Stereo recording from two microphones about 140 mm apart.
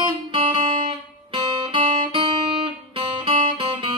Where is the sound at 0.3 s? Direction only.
40° right (ahead or behind).